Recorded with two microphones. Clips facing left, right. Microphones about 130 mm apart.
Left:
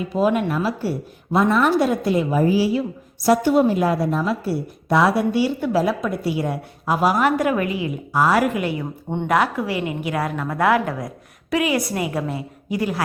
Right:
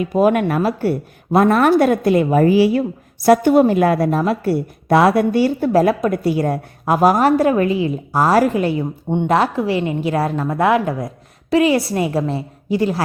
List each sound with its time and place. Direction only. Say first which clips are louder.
0.1 s a woman's voice: right 4 dB; 55° right (ahead or behind); by 8.9 s 30° right (ahead or behind)
9.0 s speech: right 6 dB; 20° right (ahead or behind)
9.3 s a woman's voice: right 3 dB; 30° right (ahead or behind)